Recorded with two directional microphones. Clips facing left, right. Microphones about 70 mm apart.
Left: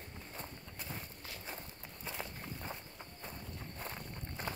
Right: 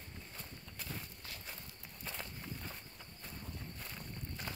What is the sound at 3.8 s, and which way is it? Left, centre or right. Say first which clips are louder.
Walk: left 3 dB; left.